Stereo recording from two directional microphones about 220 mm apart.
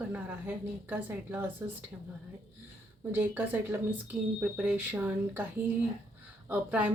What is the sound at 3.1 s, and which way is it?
A woman's voice, 10° right (ahead or behind).